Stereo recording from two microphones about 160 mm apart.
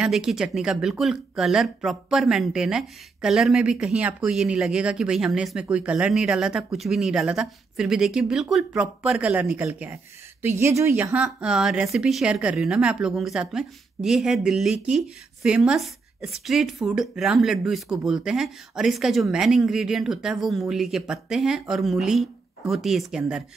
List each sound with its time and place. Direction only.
0.0 s a woman's voice: 5° right (ahead or behind)
11.2 s speech: 5° right (ahead or behind)